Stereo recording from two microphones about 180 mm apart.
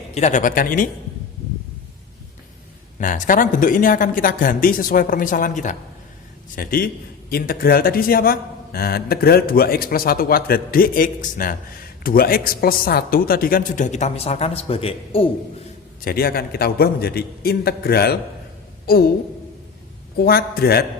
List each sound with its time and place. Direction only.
0.1 s a woman's voice: 40° left (ahead or behind)
3.0 s a woman's voice: 45° left (ahead or behind); by 15.3 s 30° left (ahead or behind)
16.0 s speech: 60° left (ahead or behind)
20.1 s speech: 55° left (ahead or behind)